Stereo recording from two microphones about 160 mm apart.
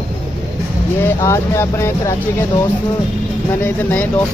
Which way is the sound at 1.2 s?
15° left (ahead or behind).